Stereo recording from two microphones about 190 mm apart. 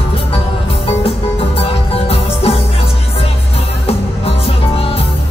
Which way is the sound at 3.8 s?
30° left (ahead or behind).